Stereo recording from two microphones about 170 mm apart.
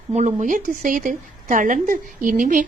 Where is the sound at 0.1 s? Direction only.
45° right (ahead or behind).